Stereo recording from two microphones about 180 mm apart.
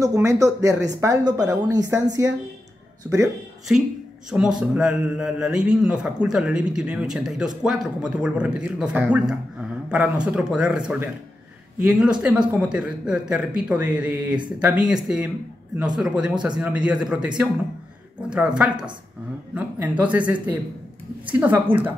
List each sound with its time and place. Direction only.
0.0 s speech: 15° right (ahead or behind)
4.3 s a man's voice: 5° right (ahead or behind)
18.3 s a man's voice: 5° right (ahead or behind)